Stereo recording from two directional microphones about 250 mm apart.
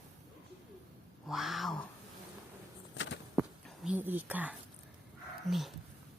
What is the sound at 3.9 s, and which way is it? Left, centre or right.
Speech, centre.